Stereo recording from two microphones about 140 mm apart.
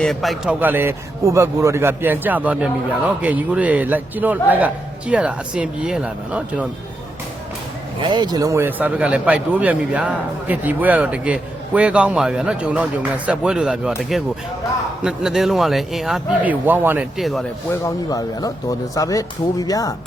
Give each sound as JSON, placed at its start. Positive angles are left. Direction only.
{"t": 0.0, "sound": "a man's voice", "side_deg": 0}
{"t": 0.6, "sound": "a man's voice", "side_deg": -15}
{"t": 8.0, "sound": "a man's voice", "side_deg": -30}
{"t": 17.2, "sound": "a man's voice", "side_deg": 0}
{"t": 17.8, "sound": "speech", "side_deg": 25}